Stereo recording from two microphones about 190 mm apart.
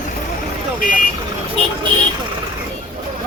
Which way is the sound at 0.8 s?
45° left (ahead or behind).